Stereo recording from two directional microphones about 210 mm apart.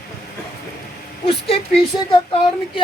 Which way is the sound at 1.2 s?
25° left (ahead or behind).